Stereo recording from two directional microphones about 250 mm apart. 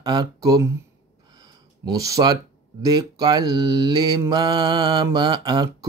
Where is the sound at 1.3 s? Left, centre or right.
Centre.